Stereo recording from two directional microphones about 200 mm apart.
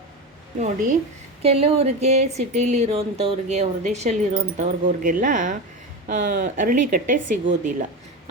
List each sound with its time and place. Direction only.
1.4 s speech: 30° right (ahead or behind)